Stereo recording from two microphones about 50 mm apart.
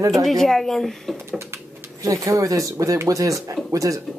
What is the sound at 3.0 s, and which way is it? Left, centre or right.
Speech, right.